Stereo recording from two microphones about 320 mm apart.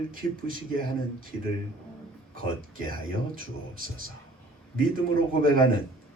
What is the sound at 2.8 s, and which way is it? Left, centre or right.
Speech, right.